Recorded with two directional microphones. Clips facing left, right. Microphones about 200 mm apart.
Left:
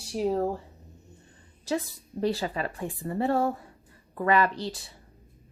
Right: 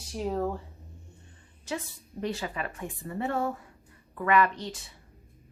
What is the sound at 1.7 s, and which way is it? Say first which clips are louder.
Speech: left 6 dB; 35° left (ahead or behind).